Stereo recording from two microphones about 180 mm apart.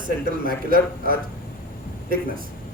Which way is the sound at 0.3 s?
50° right (ahead or behind).